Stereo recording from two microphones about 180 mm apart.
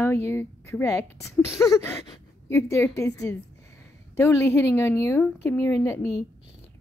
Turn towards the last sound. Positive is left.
turn(degrees=15)  # may be behind; listen again after turning